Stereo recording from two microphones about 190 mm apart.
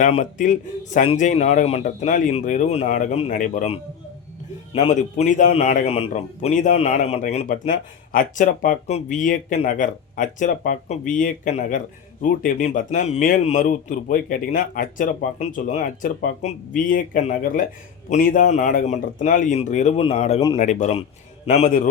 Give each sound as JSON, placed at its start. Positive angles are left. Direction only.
{"t": 0.0, "sound": "a man's voice", "side_deg": 40}